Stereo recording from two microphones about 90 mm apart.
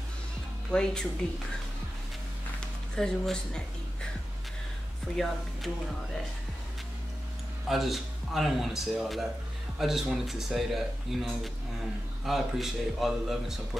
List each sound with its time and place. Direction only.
0.7 s speech: 10° left (ahead or behind)
3.0 s speech: 10° left (ahead or behind)
5.1 s speech: centre (ahead or behind)
7.6 s speech: centre (ahead or behind)